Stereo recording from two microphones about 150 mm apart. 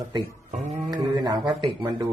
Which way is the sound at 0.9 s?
30° right (ahead or behind).